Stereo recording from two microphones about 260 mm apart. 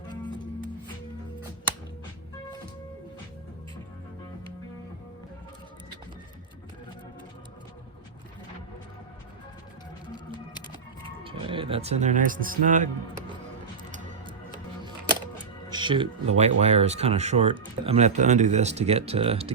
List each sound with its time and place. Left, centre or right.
11.2 s speech: centre
13.9 s music: right
15.7 s speech: centre